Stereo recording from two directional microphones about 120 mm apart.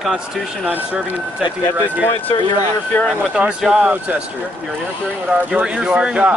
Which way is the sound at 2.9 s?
15° left (ahead or behind).